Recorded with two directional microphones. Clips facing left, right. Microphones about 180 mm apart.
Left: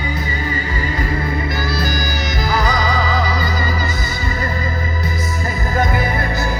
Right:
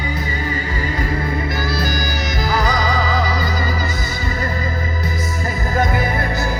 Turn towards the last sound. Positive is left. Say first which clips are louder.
# even
turn(degrees=-40)  # may be behind; listen again after turning